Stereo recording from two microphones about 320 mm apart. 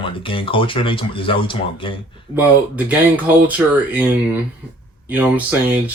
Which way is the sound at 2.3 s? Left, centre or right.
Centre.